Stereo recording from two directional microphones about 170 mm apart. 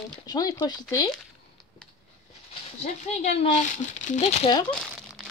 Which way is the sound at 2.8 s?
40° left (ahead or behind).